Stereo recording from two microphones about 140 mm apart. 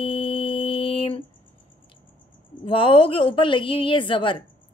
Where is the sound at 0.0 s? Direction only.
40° left (ahead or behind).